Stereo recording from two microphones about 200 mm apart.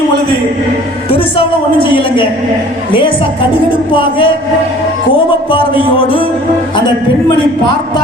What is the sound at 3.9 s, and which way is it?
Music, 25° left (ahead or behind).